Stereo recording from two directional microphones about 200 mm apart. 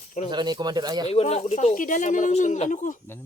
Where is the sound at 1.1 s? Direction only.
30° left (ahead or behind).